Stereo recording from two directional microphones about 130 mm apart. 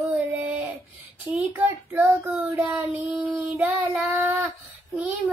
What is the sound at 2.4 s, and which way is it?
Child singing, 10° right (ahead or behind).